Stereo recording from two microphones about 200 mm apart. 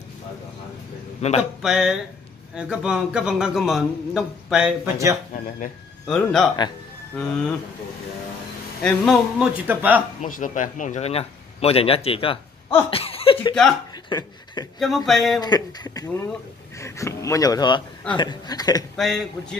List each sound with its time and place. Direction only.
1.2 s a man's voice: 30° left (ahead or behind)
1.6 s a man's voice: centre (ahead or behind)
6.0 s a man's voice: 5° left (ahead or behind)
8.8 s a man's voice: centre (ahead or behind)
10.2 s a man's voice: 40° left (ahead or behind); by 13.6 s 25° left (ahead or behind)
14.0 s a sound: 20° left (ahead or behind)
15.0 s a man's voice: centre (ahead or behind)
15.4 s speech: 20° left (ahead or behind)
18.9 s a man's voice: centre (ahead or behind)